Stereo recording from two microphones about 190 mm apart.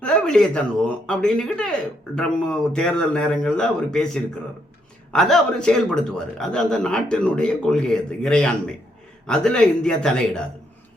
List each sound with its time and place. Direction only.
0.0 s a man's voice: 5° left (ahead or behind)